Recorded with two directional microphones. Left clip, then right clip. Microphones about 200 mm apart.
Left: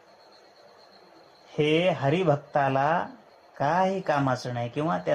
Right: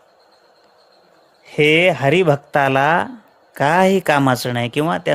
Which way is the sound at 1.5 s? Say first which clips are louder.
Right 10 dB; 35° right (ahead or behind).